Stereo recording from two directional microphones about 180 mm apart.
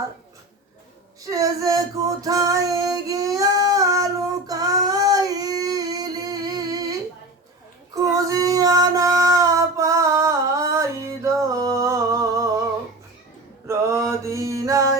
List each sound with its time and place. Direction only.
1.2 s female singing: 20° right (ahead or behind)
8.0 s female singing: 20° right (ahead or behind)
13.7 s mantra: 15° right (ahead or behind)